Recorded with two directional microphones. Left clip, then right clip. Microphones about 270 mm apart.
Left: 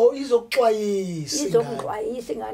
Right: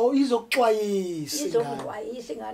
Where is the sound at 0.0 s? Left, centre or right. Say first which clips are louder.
Left 4 dB; right.